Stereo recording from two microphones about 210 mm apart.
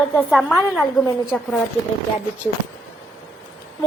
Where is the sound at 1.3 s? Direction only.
5° left (ahead or behind).